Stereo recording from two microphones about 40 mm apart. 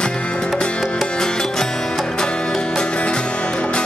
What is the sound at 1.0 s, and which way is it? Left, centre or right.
Music, centre.